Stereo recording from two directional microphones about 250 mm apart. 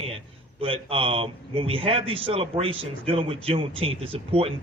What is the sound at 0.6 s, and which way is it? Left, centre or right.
A man's voice, right.